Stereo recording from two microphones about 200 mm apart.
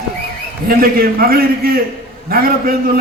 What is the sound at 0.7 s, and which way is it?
A man's voice, 50° right (ahead or behind).